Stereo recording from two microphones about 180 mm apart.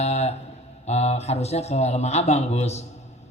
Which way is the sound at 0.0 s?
35° left (ahead or behind).